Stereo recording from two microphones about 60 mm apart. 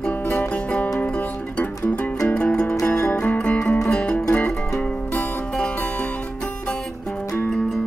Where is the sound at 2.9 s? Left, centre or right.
Left.